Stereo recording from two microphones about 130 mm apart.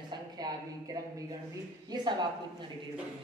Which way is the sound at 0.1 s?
30° right (ahead or behind).